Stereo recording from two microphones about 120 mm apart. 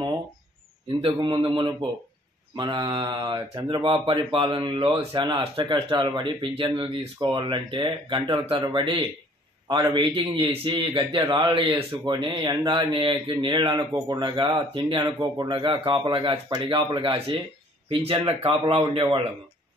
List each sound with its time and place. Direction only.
1.0 s a man's voice: 45° right (ahead or behind)